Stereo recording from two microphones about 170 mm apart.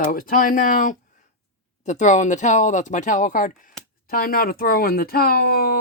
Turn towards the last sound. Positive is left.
turn(degrees=65)  # may be behind; listen again after turning